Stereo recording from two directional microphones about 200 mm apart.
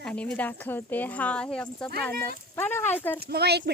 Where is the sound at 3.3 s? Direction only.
55° right (ahead or behind).